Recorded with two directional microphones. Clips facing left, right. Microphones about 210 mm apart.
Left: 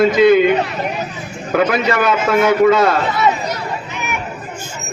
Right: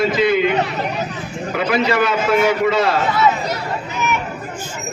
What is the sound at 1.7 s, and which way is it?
A man's voice, 45° left (ahead or behind).